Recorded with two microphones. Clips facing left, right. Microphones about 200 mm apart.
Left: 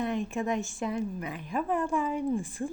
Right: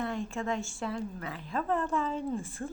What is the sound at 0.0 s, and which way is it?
A woman's voice, 20° left (ahead or behind).